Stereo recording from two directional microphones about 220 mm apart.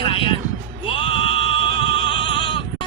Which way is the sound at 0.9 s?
25° left (ahead or behind).